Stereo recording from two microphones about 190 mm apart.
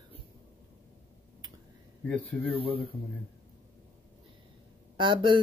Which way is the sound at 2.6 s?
30° right (ahead or behind).